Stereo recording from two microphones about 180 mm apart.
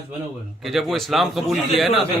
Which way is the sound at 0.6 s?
Centre (ahead or behind).